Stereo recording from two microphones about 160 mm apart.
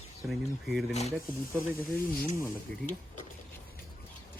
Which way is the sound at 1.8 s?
65° left (ahead or behind).